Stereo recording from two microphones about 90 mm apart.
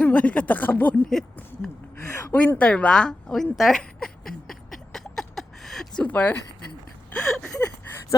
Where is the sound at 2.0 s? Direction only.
30° left (ahead or behind).